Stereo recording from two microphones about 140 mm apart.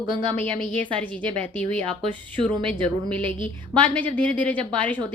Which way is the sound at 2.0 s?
35° right (ahead or behind).